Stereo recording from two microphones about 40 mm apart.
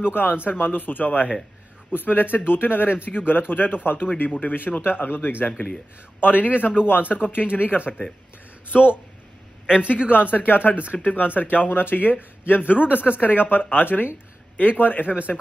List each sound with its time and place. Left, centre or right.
0.0 s speech: left
4.3 s speech: left
9.7 s a man's voice: right
10.0 s speech: left
10.8 s speech: right
11.1 s speech: left